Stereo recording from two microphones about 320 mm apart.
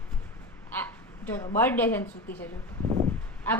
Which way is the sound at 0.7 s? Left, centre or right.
Centre.